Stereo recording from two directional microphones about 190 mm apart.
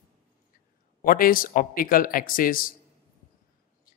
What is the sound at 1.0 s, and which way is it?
A man's voice, 50° left (ahead or behind).